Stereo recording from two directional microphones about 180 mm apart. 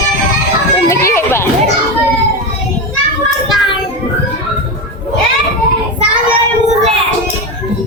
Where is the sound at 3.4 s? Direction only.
Centre (ahead or behind).